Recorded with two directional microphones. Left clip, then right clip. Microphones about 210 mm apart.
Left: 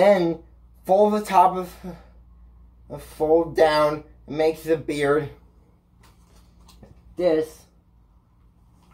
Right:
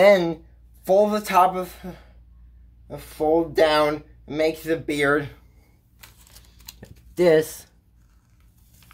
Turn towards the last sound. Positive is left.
turn(degrees=-30)  # may be behind; listen again after turning